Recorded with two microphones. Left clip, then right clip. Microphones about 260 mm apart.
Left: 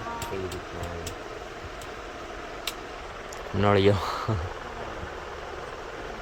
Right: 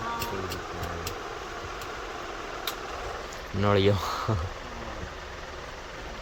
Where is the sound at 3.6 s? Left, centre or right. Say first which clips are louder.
Left 2 dB; centre.